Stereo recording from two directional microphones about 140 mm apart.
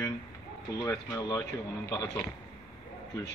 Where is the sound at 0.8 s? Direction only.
25° left (ahead or behind).